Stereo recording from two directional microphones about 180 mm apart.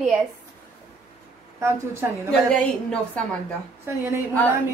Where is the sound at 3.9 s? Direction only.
15° right (ahead or behind).